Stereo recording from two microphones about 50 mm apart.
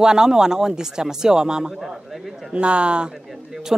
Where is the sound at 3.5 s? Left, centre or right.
Centre.